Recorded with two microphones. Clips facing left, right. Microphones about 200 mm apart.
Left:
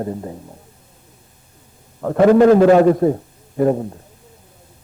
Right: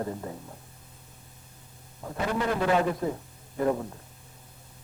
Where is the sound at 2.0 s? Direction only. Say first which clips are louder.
Left 18 dB; 75° left (ahead or behind).